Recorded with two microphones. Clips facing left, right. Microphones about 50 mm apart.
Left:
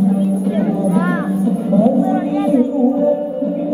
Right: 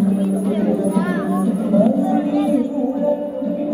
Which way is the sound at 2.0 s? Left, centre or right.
Left.